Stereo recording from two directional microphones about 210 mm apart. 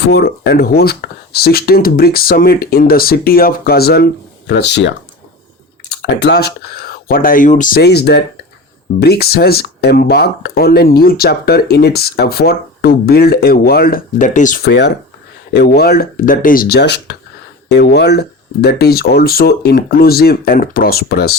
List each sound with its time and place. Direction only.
0.0 s speech: 50° left (ahead or behind)
5.9 s speech: 55° left (ahead or behind)